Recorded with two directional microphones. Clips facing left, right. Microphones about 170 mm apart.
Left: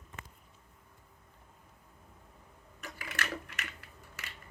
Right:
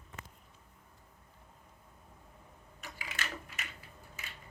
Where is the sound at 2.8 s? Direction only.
55° left (ahead or behind); by 4.3 s 75° left (ahead or behind).